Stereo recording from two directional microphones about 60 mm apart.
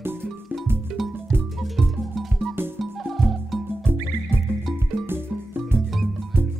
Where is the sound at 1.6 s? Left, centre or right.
Centre.